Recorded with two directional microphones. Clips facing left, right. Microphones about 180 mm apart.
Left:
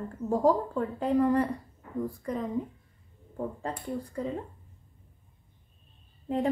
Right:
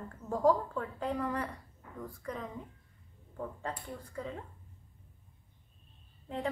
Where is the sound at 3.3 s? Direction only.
35° left (ahead or behind).